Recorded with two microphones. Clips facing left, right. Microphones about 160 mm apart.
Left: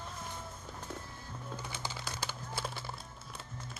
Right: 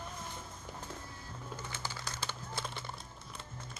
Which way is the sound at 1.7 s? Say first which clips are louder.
Left 1 dB; 15° left (ahead or behind).